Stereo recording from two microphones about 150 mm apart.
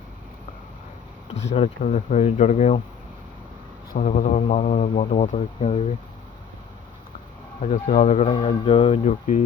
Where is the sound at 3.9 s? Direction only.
55° left (ahead or behind).